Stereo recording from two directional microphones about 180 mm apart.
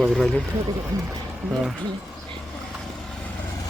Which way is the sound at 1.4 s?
Centre (ahead or behind).